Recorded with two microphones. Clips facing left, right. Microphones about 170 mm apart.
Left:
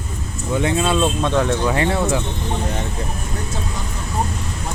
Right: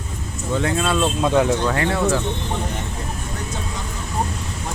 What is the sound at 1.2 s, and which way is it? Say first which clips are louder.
Speech: right 1 dB; 10° right (ahead or behind).